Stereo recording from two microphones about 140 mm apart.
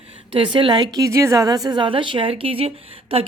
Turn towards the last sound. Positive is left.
turn(degrees=-40)  # may be behind; listen again after turning